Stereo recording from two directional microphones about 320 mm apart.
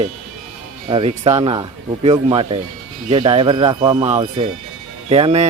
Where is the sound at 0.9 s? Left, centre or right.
Centre.